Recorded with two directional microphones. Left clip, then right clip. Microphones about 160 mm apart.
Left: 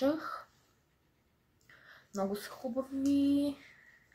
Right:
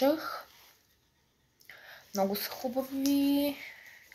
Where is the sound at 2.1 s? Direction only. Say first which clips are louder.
Right 5 dB; 20° left (ahead or behind).